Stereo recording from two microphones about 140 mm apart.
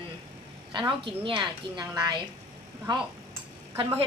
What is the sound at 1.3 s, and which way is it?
Speech, 30° right (ahead or behind).